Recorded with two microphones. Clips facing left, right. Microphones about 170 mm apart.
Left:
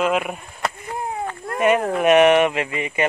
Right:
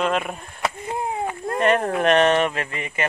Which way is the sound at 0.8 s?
20° right (ahead or behind).